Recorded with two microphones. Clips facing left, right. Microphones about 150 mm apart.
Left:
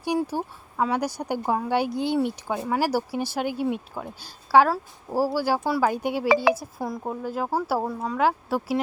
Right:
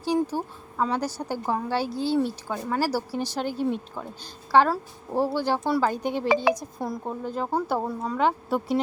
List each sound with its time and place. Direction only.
0.0 s speech: 10° left (ahead or behind)
6.2 s speech: 90° left
6.5 s speech: 5° left (ahead or behind)